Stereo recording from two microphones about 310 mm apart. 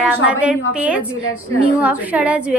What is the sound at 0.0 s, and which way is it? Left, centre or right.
A woman's voice, centre.